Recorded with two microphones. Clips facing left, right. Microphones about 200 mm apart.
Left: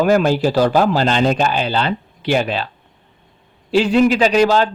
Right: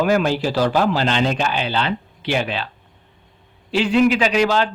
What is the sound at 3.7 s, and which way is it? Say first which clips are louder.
A man's voice: left 3 dB; 40° left (ahead or behind).